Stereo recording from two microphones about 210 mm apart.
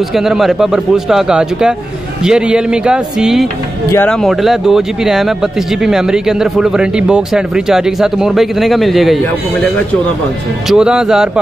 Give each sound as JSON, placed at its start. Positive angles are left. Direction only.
{"t": 0.1, "sound": "speech", "side_deg": 0}
{"t": 10.7, "sound": "speech", "side_deg": -5}